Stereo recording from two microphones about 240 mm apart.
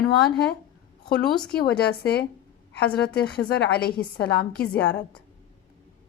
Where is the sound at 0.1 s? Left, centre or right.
Left.